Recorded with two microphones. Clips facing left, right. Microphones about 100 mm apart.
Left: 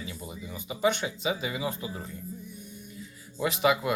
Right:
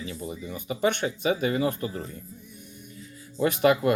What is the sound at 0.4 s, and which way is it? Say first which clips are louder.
Speech: right 1 dB; 55° right (ahead or behind).